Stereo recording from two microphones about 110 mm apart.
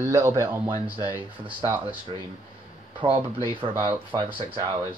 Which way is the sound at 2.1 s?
50° right (ahead or behind).